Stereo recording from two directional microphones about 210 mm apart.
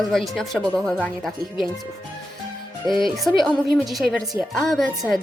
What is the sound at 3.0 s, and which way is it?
A woman's voice, centre (ahead or behind).